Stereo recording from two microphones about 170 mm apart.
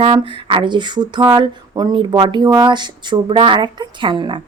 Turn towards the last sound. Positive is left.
turn(degrees=-30)  # may be behind; listen again after turning